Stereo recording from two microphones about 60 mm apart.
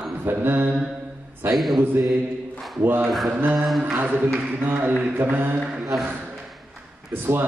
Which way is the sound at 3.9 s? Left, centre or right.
Right.